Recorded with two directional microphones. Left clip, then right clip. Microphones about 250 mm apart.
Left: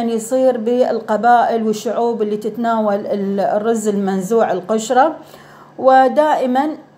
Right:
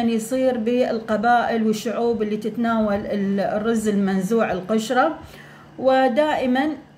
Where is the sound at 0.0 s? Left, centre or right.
Centre.